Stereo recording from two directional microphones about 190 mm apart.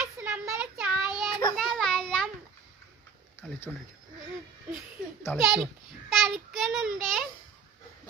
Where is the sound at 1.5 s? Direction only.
Centre (ahead or behind).